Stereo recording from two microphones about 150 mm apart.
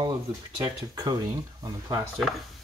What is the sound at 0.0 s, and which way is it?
Speech, 25° right (ahead or behind).